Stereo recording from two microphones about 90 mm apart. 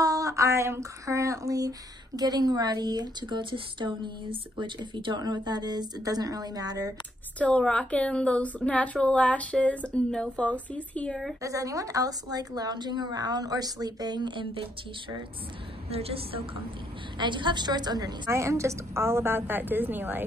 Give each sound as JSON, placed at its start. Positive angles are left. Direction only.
{"t": 0.0, "sound": "a sound", "side_deg": -40}
{"t": 7.3, "sound": "a woman's voice", "side_deg": 15}
{"t": 11.4, "sound": "a sound", "side_deg": -40}
{"t": 16.0, "sound": "a woman's voice", "side_deg": -90}
{"t": 17.2, "sound": "a woman's voice", "side_deg": -60}
{"t": 18.3, "sound": "a woman's voice", "side_deg": -35}